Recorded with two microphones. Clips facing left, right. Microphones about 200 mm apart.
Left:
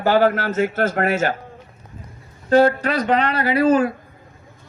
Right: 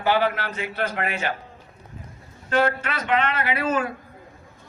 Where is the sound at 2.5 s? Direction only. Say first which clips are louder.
Left 8 dB; 35° left (ahead or behind).